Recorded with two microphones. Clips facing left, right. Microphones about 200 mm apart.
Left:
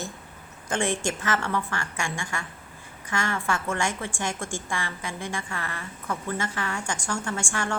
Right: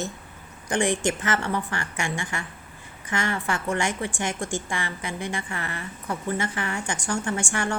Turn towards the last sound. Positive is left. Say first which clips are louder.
# right 3 dB
turn(degrees=-20)  # may be behind; listen again after turning